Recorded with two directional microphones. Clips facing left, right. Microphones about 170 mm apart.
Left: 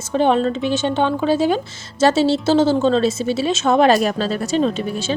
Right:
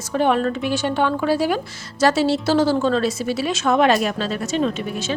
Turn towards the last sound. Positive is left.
turn(degrees=35)  # may be behind; listen again after turning